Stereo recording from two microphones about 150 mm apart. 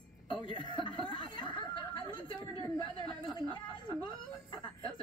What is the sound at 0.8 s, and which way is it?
Snicker, 30° left (ahead or behind).